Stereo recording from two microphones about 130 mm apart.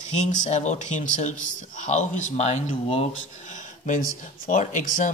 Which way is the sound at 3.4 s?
75° left (ahead or behind).